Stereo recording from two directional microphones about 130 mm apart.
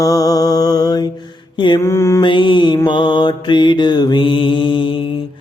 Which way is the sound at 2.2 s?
40° left (ahead or behind).